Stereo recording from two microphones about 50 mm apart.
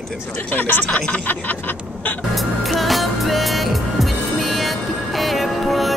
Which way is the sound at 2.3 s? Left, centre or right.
Centre.